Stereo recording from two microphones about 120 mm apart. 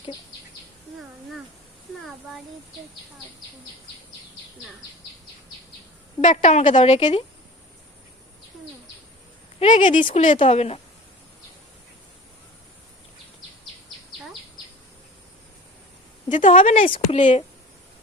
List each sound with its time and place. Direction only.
6.2 s a woman's voice: 80° left
9.6 s speech: 80° left; by 10.8 s 60° left (ahead or behind)
16.3 s speech: 90° left
16.6 s speech: 55° left (ahead or behind); by 17.4 s 70° left (ahead or behind)